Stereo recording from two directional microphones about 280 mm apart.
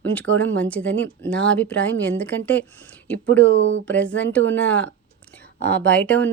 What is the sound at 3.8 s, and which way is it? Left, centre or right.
Speech, centre.